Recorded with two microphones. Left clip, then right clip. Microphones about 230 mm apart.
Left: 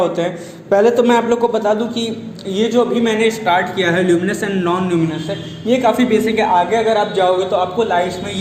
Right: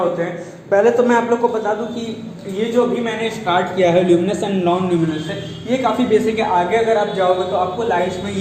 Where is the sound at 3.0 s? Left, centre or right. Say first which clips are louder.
Left 5 dB; left.